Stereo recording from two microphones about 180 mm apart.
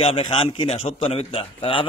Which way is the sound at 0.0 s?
30° left (ahead or behind).